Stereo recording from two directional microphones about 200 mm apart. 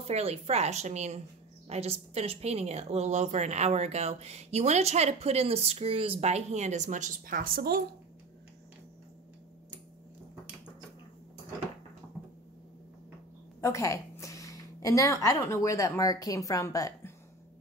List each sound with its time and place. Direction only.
0.0 s a woman's voice: 30° right (ahead or behind); by 7.8 s 50° right (ahead or behind)
13.6 s a woman's voice: 15° left (ahead or behind)